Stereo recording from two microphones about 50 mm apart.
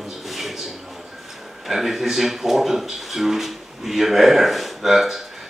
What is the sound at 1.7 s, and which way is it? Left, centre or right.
A man's voice, centre.